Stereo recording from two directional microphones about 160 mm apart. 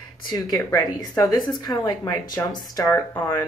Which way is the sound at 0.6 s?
20° left (ahead or behind).